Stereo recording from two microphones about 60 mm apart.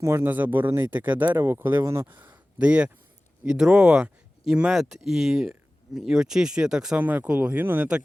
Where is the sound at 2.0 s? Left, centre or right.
Right.